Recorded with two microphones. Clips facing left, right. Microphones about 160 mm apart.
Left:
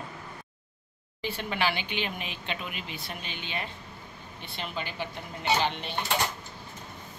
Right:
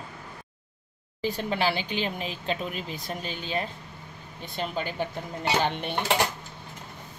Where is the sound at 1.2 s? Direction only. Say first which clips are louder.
Right 3 dB; 35° right (ahead or behind).